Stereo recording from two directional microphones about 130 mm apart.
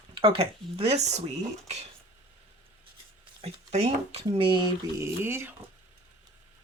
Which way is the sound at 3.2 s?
50° right (ahead or behind).